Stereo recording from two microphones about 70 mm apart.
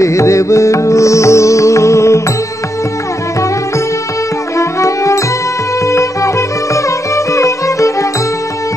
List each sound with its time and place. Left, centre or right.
0.0 s music: left
4.6 s music: left